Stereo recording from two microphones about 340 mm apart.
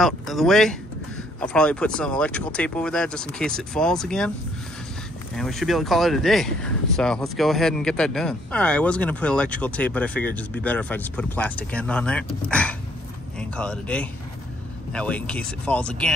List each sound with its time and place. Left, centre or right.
0.0 s speech: centre
5.3 s speech: centre